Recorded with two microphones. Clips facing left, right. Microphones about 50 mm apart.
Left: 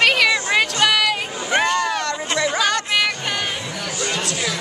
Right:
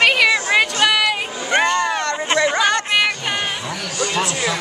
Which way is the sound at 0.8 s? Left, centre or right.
Centre.